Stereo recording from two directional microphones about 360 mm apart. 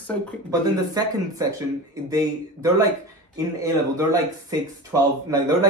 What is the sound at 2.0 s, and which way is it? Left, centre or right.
A man's voice, centre.